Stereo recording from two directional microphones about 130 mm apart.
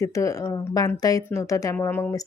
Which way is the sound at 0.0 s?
25° left (ahead or behind).